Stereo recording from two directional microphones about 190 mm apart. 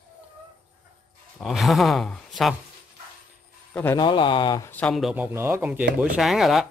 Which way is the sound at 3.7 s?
10° left (ahead or behind).